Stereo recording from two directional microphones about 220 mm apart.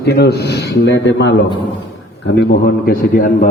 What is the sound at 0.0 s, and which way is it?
A man's voice, 50° left (ahead or behind).